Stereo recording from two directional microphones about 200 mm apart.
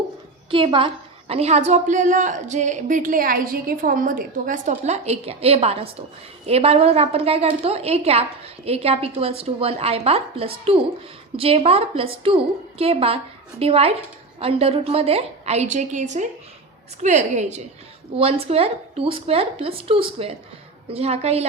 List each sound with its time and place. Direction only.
0.5 s a woman's voice: 25° right (ahead or behind)